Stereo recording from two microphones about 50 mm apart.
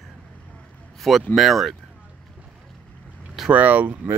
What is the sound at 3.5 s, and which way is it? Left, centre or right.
Speech, right.